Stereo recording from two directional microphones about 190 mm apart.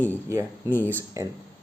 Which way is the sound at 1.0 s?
15° right (ahead or behind).